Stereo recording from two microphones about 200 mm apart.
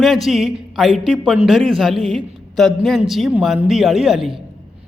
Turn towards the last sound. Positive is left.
turn(degrees=0)  # may be behind; listen again after turning